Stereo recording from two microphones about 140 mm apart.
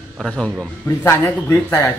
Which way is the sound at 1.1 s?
15° left (ahead or behind).